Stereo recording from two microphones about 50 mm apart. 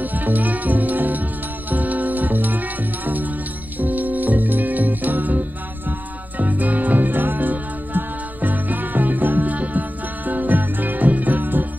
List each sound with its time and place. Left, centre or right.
0.0 s music: right
3.8 s music: right